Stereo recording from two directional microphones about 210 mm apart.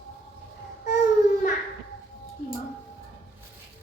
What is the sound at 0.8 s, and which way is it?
Baby cry, 35° left (ahead or behind).